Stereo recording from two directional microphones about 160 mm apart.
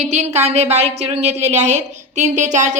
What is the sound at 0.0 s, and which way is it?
A woman's voice, 45° right (ahead or behind).